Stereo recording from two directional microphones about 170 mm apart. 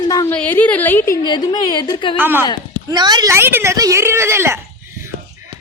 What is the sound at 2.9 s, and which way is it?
A child's voice, 25° right (ahead or behind).